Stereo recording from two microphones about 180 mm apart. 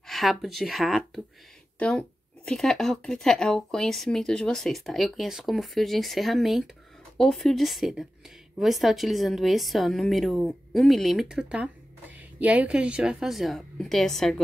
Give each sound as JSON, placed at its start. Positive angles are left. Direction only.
{"t": 0.0, "sound": "a woman's voice", "side_deg": 0}